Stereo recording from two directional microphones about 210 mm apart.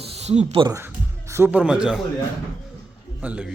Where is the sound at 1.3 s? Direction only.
10° right (ahead or behind).